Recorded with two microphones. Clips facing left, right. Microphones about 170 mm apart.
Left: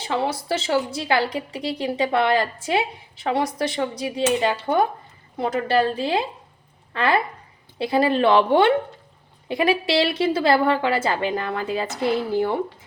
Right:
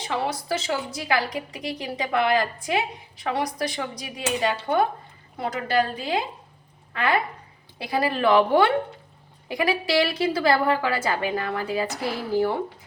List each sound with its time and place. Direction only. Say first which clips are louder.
0.0 s a woman's voice: left 3 dB; 25° left (ahead or behind)